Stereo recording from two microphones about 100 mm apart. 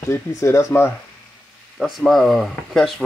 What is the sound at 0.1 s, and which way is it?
Speech, 30° left (ahead or behind).